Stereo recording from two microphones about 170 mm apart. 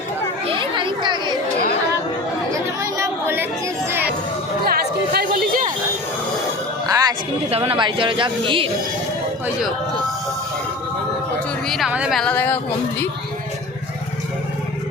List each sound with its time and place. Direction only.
0.4 s chatter: 30° right (ahead or behind)
2.5 s chatter: 15° right (ahead or behind)
3.8 s music: 10° right (ahead or behind)
4.6 s chatter: 65° right (ahead or behind)
6.8 s music: 20° right (ahead or behind)
7.5 s speech: 35° right (ahead or behind)
11.7 s speech: 5° right (ahead or behind)
12.2 s speech: 10° left (ahead or behind)